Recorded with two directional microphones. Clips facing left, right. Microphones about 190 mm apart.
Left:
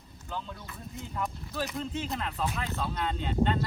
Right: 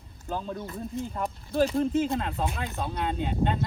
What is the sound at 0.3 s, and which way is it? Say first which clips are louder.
Speech: right 7 dB; 40° right (ahead or behind).